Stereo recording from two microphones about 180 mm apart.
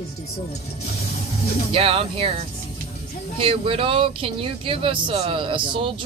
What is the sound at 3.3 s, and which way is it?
Speech, 30° right (ahead or behind).